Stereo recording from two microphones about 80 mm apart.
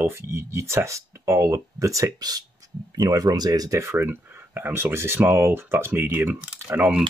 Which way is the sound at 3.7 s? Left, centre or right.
Right.